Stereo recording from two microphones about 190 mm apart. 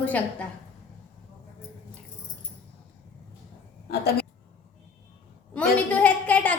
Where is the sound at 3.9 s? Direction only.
55° left (ahead or behind).